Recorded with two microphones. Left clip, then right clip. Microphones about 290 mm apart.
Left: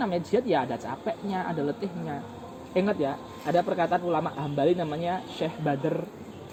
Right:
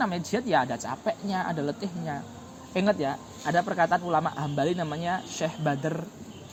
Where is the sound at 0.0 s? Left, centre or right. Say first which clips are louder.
Left 2 dB; right.